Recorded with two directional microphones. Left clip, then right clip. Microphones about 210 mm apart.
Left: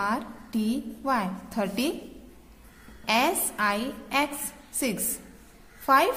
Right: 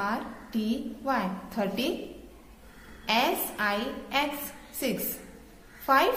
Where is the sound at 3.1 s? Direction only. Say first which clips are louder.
Left 2 dB; 40° left (ahead or behind).